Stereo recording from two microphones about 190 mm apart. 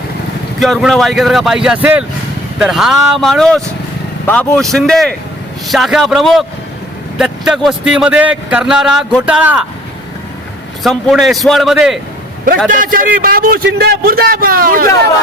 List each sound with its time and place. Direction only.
0.6 s a man's voice: centre (ahead or behind)
10.8 s a man's voice: centre (ahead or behind)
12.7 s a man's voice: 45° right (ahead or behind)